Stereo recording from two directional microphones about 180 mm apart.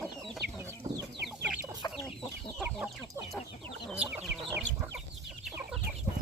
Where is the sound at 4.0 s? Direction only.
5° right (ahead or behind).